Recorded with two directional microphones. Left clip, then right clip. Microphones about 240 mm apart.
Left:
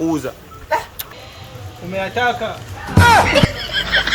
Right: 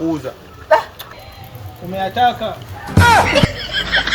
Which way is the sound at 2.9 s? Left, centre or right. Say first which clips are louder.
Even; centre.